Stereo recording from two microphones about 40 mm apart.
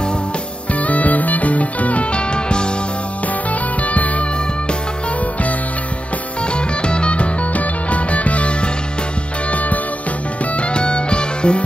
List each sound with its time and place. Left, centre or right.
0.7 s music: left
3.8 s music: left
6.4 s music: left